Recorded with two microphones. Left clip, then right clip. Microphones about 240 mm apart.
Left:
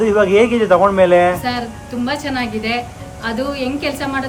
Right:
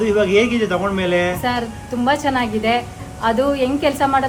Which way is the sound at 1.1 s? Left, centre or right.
Left.